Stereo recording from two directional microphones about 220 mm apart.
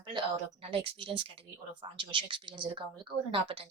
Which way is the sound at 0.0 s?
20° right (ahead or behind).